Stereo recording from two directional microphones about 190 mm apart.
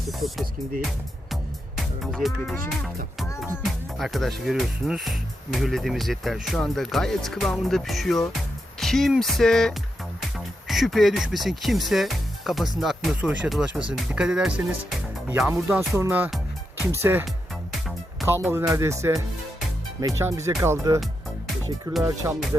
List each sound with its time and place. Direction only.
0.1 s speech: centre (ahead or behind)
3.2 s music: 15° left (ahead or behind)
3.6 s speech: centre (ahead or behind)
17.2 s music: centre (ahead or behind)
18.3 s speech: 15° right (ahead or behind)